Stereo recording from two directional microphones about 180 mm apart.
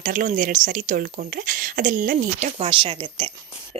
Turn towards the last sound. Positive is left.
turn(degrees=-30)  # may be behind; listen again after turning